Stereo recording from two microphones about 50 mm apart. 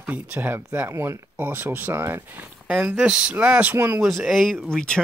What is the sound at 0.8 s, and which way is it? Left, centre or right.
Speech, right.